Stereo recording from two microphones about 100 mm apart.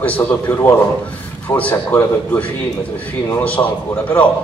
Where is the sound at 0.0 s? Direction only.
15° left (ahead or behind).